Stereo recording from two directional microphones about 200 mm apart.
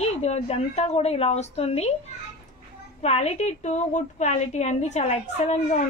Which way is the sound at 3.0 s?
30° left (ahead or behind).